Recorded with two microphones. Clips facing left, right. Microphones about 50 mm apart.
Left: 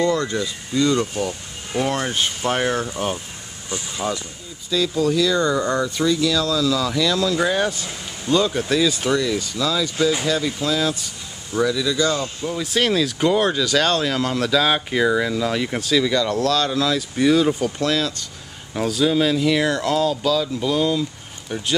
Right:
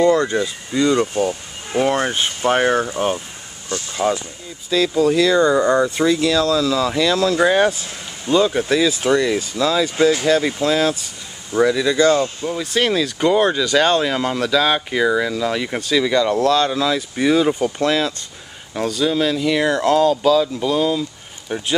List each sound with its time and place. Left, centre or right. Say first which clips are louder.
0.0 s speech: right 5 dB; right
3.7 s speech: right 3 dB; centre
4.7 s speech: right 4 dB; right
5.3 s speech: right 5 dB; centre
5.9 s speech: right 3 dB; right
8.3 s speech: right 3 dB; centre
9.2 s speech: right 4 dB; right
12.4 s speech: right 2 dB; centre
18.8 s speech: even; centre